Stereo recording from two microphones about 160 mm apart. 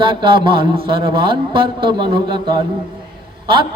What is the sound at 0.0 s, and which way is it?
A man's voice, 30° right (ahead or behind).